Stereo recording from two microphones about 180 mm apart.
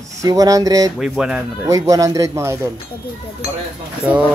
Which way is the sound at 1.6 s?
20° right (ahead or behind).